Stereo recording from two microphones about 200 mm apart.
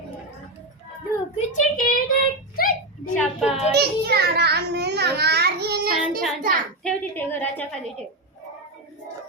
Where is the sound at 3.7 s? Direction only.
55° right (ahead or behind).